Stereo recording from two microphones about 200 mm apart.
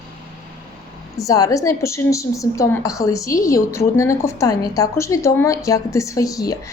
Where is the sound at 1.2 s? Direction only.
15° left (ahead or behind).